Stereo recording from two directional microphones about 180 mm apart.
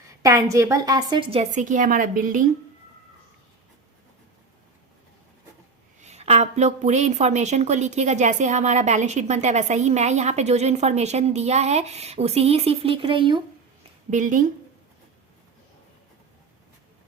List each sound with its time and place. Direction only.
0.2 s a woman's voice: 20° right (ahead or behind); by 2.4 s 50° right (ahead or behind)
6.0 s a woman's voice: 40° right (ahead or behind)
14.1 s a woman's voice: 45° right (ahead or behind)